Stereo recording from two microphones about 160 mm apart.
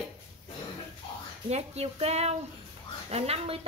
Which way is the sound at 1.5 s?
40° right (ahead or behind).